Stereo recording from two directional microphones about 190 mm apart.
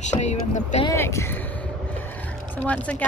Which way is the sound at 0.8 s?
15° left (ahead or behind).